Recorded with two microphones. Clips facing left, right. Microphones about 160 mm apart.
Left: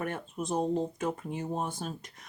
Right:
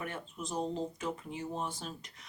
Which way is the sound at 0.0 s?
50° left (ahead or behind).